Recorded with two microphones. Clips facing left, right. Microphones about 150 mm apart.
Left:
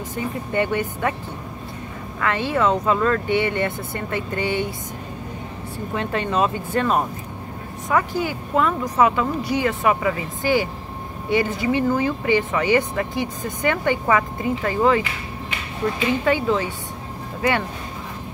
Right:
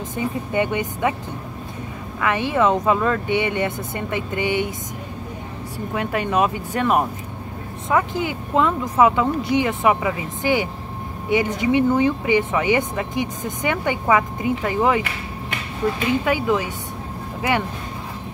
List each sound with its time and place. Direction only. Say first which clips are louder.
0.1 s speech: right 2 dB; 15° right (ahead or behind)
2.1 s speech: right 2 dB; 15° right (ahead or behind)
5.9 s speech: right 1 dB; 10° right (ahead or behind)
16.3 s speech: even; 15° right (ahead or behind)